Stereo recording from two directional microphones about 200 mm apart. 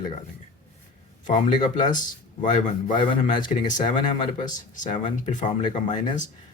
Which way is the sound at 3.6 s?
40° left (ahead or behind).